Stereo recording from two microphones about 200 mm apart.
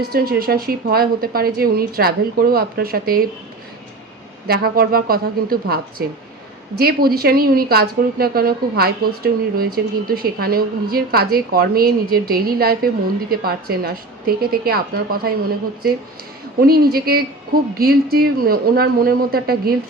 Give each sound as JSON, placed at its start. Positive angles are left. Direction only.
{"t": 0.0, "sound": "a woman's voice", "side_deg": -50}
{"t": 4.4, "sound": "a woman's voice", "side_deg": -50}